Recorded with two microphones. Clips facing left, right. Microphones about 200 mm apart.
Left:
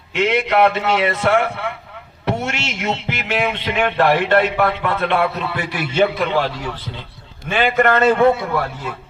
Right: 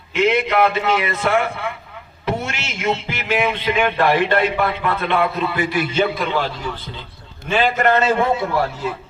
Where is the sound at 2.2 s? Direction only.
65° left (ahead or behind).